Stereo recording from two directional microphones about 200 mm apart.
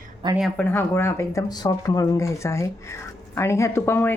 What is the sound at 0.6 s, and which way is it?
Speech, 10° left (ahead or behind).